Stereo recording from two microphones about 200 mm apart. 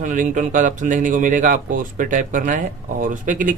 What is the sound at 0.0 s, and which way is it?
Speech, 40° right (ahead or behind).